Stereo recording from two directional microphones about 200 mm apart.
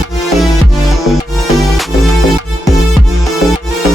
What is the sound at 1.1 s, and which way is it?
Music, centre (ahead or behind).